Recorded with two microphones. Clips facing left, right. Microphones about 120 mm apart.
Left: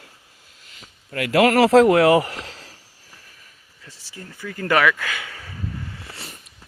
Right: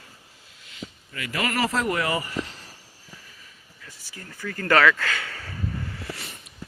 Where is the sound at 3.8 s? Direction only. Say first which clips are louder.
Left 3 dB; 25° left (ahead or behind).